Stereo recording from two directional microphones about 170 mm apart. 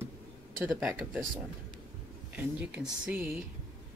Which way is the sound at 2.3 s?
5° right (ahead or behind).